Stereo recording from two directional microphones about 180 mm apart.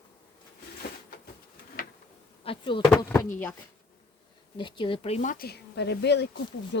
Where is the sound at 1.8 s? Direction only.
50° left (ahead or behind).